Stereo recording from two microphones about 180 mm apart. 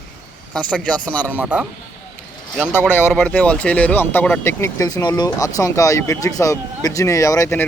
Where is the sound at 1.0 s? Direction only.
10° left (ahead or behind).